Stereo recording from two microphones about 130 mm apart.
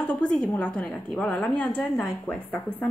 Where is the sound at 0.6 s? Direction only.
10° left (ahead or behind).